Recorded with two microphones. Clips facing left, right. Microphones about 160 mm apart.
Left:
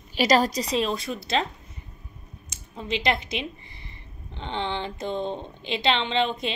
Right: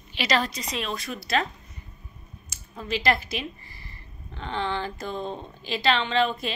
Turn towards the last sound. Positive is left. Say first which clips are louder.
# right 1 dB
turn(degrees=25)  # may be behind; listen again after turning